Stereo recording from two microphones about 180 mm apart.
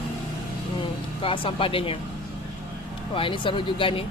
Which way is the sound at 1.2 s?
30° left (ahead or behind).